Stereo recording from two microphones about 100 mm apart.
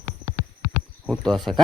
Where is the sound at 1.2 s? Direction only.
5° left (ahead or behind).